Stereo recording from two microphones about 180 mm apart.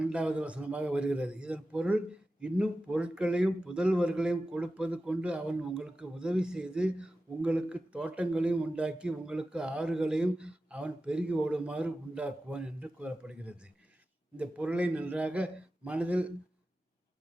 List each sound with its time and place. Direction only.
0.0 s a man's voice: 5° right (ahead or behind)